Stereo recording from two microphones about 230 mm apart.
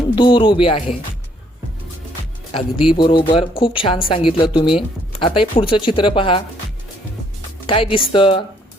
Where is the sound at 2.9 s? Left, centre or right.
Left.